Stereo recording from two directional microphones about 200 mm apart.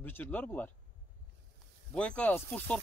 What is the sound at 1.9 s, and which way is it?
Speech, 5° left (ahead or behind).